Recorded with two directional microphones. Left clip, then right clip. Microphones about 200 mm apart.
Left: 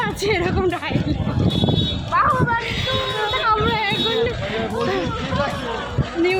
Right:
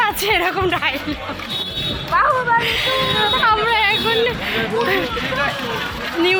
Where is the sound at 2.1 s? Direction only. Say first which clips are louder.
Right 2 dB; 35° right (ahead or behind).